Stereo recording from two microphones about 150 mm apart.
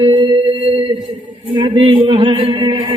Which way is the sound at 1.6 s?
35° right (ahead or behind).